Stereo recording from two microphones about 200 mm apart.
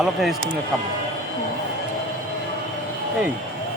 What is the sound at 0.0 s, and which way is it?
Speech, centre (ahead or behind).